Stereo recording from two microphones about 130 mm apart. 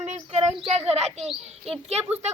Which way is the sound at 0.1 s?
55° right (ahead or behind).